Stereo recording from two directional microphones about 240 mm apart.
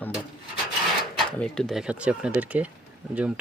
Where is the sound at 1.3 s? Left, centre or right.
Centre.